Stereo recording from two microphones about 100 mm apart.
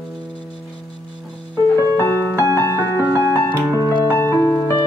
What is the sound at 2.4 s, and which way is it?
Music, 30° right (ahead or behind).